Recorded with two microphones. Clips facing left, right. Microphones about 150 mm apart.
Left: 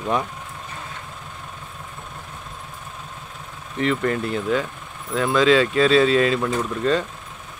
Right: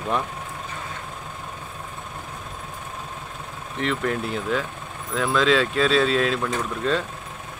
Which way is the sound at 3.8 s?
Centre (ahead or behind).